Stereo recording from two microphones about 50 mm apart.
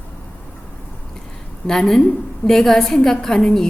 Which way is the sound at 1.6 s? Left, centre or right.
Centre.